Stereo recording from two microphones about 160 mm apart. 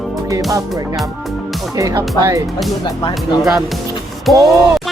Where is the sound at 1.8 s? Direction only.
20° right (ahead or behind).